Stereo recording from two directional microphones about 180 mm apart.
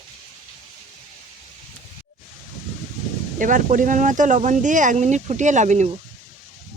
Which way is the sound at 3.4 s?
45° right (ahead or behind).